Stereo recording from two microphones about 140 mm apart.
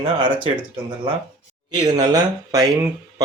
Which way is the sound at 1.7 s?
30° right (ahead or behind).